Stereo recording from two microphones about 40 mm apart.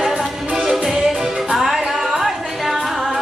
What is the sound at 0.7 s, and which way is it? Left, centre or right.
Music, centre.